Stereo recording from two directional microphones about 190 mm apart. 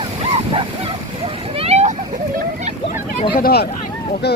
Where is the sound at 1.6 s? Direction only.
35° right (ahead or behind).